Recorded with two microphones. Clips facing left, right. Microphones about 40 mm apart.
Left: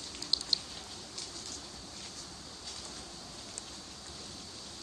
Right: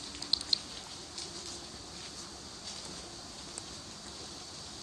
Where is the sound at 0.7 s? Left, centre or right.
Centre.